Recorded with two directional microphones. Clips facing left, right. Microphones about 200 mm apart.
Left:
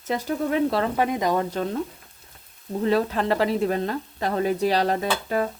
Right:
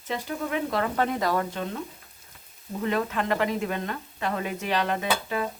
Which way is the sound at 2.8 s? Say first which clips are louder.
Left 5 dB; 35° left (ahead or behind).